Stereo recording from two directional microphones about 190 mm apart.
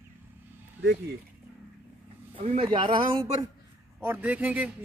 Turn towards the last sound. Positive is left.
turn(degrees=-10)  # may be behind; listen again after turning